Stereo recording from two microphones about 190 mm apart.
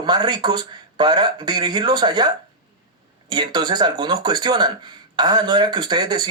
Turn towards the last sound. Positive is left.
turn(degrees=-25)  # may be behind; listen again after turning